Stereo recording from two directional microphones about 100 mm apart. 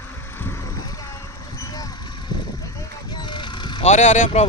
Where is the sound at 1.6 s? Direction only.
40° left (ahead or behind).